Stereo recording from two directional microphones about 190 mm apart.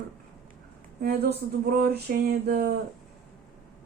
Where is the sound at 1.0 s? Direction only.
55° right (ahead or behind).